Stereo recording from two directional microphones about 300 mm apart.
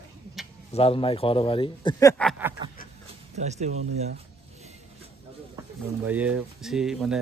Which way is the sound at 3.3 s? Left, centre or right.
Right.